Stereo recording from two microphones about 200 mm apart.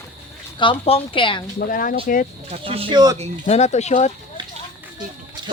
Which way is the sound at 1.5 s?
45° left (ahead or behind).